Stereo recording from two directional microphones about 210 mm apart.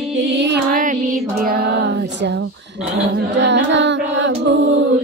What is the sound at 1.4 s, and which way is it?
Child singing, 45° right (ahead or behind).